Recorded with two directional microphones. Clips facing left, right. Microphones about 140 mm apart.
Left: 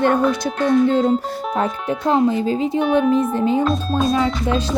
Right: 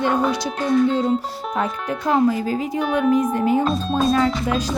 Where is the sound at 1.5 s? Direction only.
30° left (ahead or behind).